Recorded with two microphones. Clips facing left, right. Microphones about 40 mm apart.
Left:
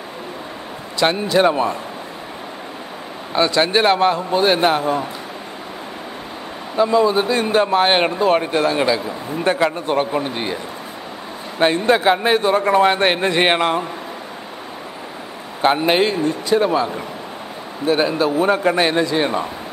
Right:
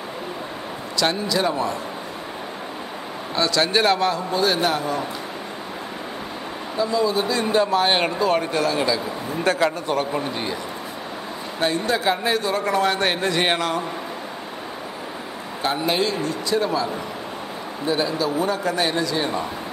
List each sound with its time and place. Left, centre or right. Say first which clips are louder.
0.9 s a man's voice: left 6 dB; left
3.3 s a man's voice: left 4 dB; left
6.8 s a man's voice: left 6 dB; left
9.8 s a man's voice: left 4 dB; left
11.6 s a man's voice: left 6 dB; left
15.6 s a man's voice: left 7 dB; left